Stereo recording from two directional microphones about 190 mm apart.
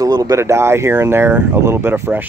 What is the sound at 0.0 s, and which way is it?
Speech, 20° right (ahead or behind).